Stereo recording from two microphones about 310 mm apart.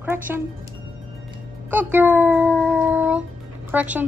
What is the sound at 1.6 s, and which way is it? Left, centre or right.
Speech, centre.